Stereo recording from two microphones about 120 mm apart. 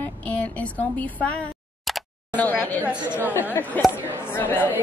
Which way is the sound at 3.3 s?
15° left (ahead or behind).